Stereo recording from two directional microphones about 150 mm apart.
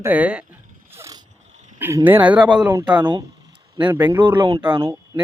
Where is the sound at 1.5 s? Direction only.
50° right (ahead or behind).